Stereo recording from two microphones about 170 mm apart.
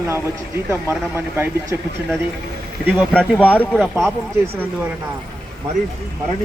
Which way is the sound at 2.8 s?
10° right (ahead or behind).